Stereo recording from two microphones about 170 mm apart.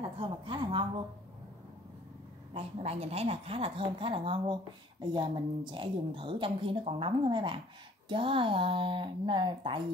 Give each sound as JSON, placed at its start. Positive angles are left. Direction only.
{"t": 0.0, "sound": "speech", "side_deg": -30}
{"t": 2.5, "sound": "a woman's voice", "side_deg": -35}